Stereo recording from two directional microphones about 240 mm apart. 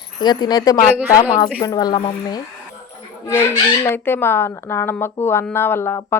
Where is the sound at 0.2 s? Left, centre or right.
Centre.